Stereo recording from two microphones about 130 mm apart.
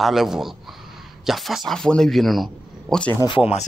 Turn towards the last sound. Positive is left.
turn(degrees=40)  # may be behind; listen again after turning